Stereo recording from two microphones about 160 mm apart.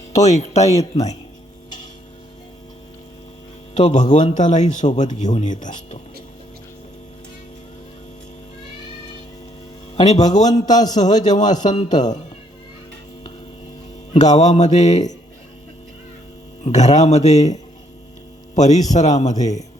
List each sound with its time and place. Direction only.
0.1 s a man's voice: 45° left (ahead or behind)
0.7 s speech: 20° left (ahead or behind)
3.8 s a man's voice: 50° left (ahead or behind)
9.9 s a man's voice: 45° left (ahead or behind)
14.1 s a man's voice: 45° left (ahead or behind)
16.6 s a man's voice: 45° left (ahead or behind)